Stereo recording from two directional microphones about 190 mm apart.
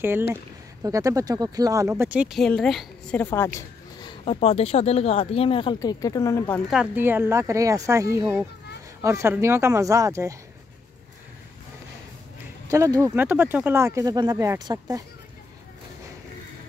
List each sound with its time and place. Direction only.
0.8 s speech: 15° right (ahead or behind); by 3.3 s 5° left (ahead or behind)
3.3 s a sound: 15° left (ahead or behind)
4.2 s speech: 30° left (ahead or behind); by 6.6 s 15° left (ahead or behind)
6.7 s speech: 10° right (ahead or behind)
12.6 s speech: 15° right (ahead or behind)